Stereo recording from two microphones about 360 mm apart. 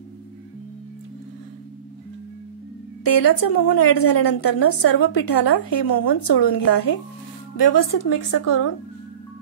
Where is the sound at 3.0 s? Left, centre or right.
Left.